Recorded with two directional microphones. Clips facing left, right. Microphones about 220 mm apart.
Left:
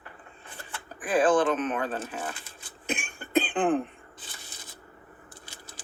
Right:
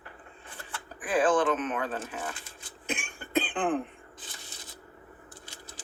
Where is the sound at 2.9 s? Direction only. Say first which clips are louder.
Left 3 dB; 40° left (ahead or behind).